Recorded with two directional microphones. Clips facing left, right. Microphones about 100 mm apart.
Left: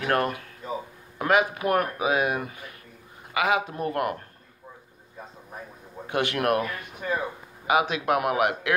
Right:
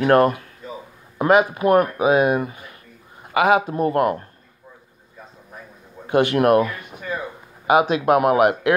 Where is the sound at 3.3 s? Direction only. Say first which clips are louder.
Right 7 dB; 45° right (ahead or behind).